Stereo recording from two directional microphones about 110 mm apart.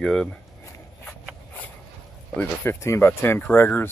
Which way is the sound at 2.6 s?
25° left (ahead or behind).